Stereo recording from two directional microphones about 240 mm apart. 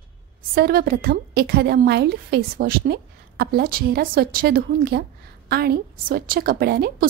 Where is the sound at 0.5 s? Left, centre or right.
Right.